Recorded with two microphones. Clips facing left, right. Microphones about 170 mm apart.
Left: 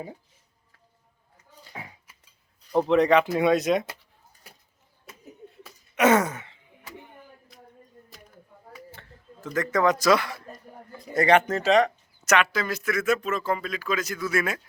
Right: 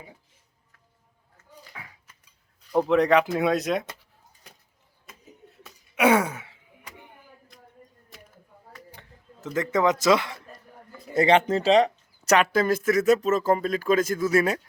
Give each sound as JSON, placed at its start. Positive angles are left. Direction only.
{"t": 1.4, "sound": "a sound", "side_deg": 25}
{"t": 2.7, "sound": "speech", "side_deg": 0}
{"t": 5.0, "sound": "a sound", "side_deg": 5}
{"t": 5.9, "sound": "gasp", "side_deg": -10}
{"t": 8.9, "sound": "speech", "side_deg": -15}
{"t": 12.5, "sound": "speech", "side_deg": -50}